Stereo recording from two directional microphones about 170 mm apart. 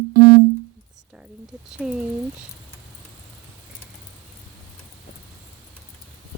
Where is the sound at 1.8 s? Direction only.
5° right (ahead or behind).